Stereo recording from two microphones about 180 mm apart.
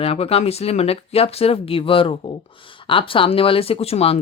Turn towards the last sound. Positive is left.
turn(degrees=35)  # may be behind; listen again after turning